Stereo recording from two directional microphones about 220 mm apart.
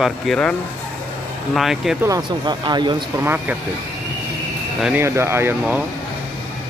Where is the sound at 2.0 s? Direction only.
15° right (ahead or behind).